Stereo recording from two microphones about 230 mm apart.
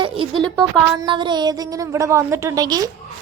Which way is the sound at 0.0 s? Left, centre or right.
Right.